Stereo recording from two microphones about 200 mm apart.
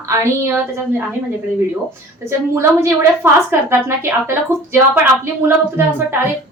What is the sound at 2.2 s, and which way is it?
A woman's voice, 15° right (ahead or behind).